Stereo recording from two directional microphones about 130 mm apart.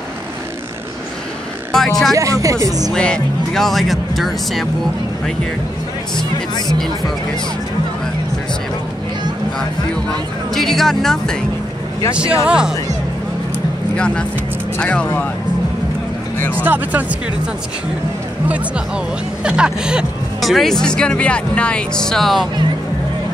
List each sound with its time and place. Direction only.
1.7 s speech: 5° left (ahead or behind)
2.1 s speech: 25° right (ahead or behind)
2.9 s speech: 5° left (ahead or behind)
6.1 s speech: 35° left (ahead or behind)
10.5 s speech: centre (ahead or behind)
12.4 s speech: 5° right (ahead or behind)
13.9 s speech: 5° left (ahead or behind)
16.3 s speech: 15° left (ahead or behind)
16.6 s speech: 15° right (ahead or behind)
19.4 s speech: 5° right (ahead or behind)